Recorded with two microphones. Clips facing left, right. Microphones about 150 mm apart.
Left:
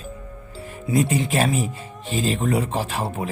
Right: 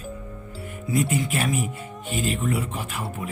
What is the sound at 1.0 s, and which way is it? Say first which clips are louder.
Speech: left 4 dB; 30° left (ahead or behind).